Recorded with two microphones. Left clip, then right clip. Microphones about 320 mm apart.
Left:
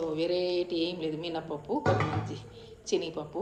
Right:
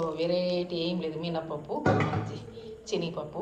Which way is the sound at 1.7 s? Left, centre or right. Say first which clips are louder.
Left 3 dB; left.